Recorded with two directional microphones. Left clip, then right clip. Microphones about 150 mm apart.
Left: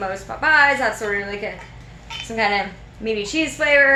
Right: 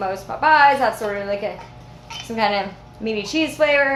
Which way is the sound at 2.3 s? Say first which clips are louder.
Even; 20° right (ahead or behind).